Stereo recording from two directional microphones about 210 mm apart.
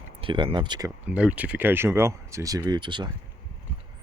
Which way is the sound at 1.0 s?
5° right (ahead or behind).